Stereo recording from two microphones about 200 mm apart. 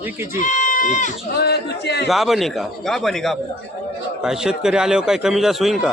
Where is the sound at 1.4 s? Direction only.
55° left (ahead or behind).